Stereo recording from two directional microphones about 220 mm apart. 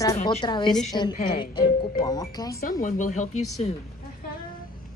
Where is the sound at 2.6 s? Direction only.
35° left (ahead or behind).